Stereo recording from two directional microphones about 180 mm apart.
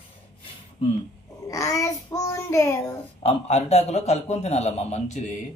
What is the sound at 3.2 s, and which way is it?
A man's voice, 35° left (ahead or behind).